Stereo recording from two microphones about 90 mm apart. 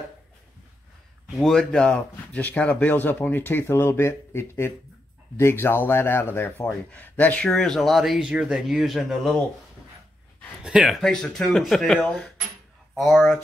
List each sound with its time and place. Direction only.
1.3 s speech: 5° left (ahead or behind)
7.4 s speech: 5° left (ahead or behind)
10.6 s speech: 10° right (ahead or behind)
11.0 s speech: 5° left (ahead or behind)